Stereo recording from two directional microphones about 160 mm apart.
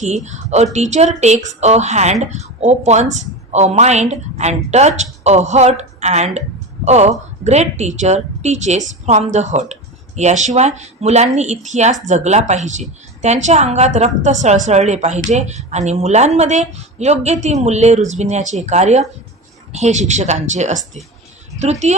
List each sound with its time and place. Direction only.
0.0 s a woman's voice: 45° right (ahead or behind)